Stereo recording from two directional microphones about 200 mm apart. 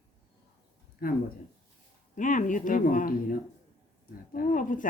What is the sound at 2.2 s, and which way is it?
Speech, 40° left (ahead or behind).